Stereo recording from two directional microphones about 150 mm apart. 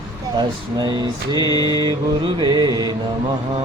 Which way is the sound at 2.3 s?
30° right (ahead or behind).